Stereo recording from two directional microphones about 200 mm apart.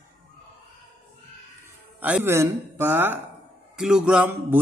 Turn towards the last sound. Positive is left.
turn(degrees=-10)  # may be behind; listen again after turning